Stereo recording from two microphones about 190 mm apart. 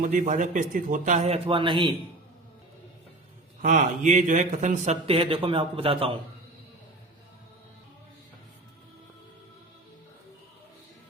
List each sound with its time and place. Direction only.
0.0 s a man's voice: 40° right (ahead or behind); by 1.9 s 25° right (ahead or behind)
3.6 s a man's voice: 40° right (ahead or behind)